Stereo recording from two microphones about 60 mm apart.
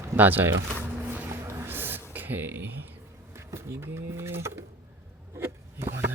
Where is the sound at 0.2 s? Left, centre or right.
Right.